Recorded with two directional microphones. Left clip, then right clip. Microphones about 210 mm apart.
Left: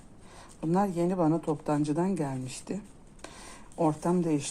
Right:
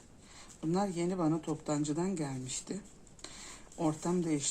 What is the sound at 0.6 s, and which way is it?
Speech, 35° left (ahead or behind).